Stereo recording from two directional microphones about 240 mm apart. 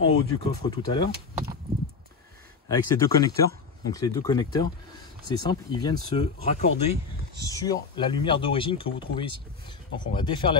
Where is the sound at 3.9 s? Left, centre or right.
Centre.